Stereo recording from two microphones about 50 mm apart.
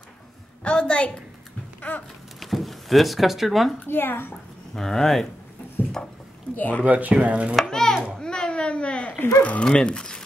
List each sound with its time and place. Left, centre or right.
0.7 s a woman's voice: centre
1.8 s a sound: left
2.4 s speech: centre
3.8 s speech: left
4.7 s speech: centre
6.0 s dishes: centre
6.5 s speech: left
6.8 s speech: right
7.6 s chopping: centre
8.2 s a sound: centre
9.4 s speech: left